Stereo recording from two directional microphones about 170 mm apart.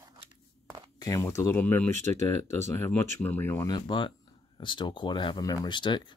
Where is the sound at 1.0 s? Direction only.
20° left (ahead or behind).